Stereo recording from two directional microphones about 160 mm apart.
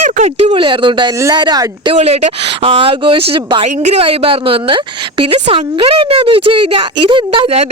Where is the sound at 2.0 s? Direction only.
40° right (ahead or behind).